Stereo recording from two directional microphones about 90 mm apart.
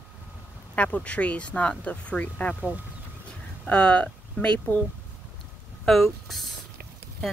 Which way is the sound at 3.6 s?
10° left (ahead or behind).